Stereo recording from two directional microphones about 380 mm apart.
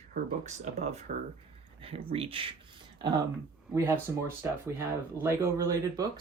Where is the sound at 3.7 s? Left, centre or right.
Centre.